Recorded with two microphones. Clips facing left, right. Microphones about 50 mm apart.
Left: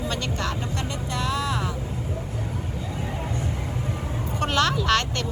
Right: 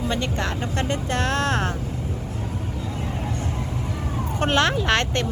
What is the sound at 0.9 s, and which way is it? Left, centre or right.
Speech, right.